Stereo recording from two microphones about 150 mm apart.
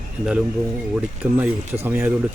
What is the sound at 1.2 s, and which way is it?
Speech, 20° right (ahead or behind).